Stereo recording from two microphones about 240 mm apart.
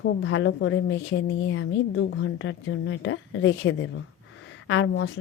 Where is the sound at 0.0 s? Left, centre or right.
Left.